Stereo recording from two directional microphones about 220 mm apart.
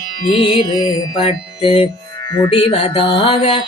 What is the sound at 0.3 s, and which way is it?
Music, 20° left (ahead or behind).